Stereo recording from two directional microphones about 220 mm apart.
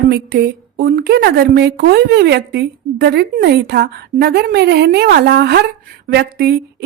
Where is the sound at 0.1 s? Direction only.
50° right (ahead or behind).